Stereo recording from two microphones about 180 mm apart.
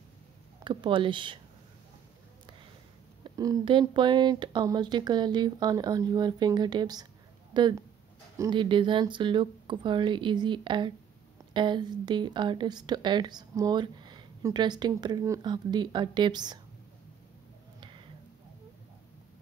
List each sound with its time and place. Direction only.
0.7 s speech: 25° right (ahead or behind)
3.3 s speech: 20° right (ahead or behind)
17.7 s a sound: 25° right (ahead or behind)